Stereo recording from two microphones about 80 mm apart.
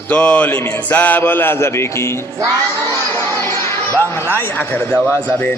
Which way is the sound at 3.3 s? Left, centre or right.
Left.